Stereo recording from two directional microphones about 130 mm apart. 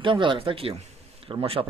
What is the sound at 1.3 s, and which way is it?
Speech, 45° right (ahead or behind).